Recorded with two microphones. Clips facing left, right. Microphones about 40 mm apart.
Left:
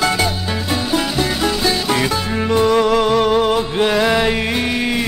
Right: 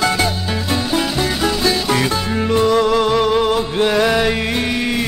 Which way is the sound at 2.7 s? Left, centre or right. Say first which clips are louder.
Left 1 dB; centre.